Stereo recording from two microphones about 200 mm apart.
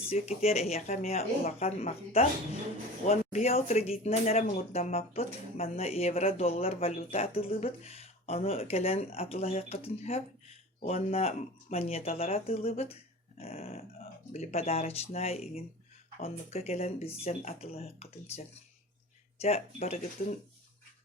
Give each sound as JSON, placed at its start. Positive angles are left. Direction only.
{"t": 0.1, "sound": "speech", "side_deg": 30}